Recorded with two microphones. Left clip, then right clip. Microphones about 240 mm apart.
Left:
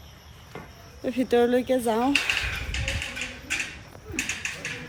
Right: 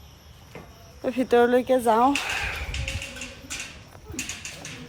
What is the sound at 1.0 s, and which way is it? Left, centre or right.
Speech, right.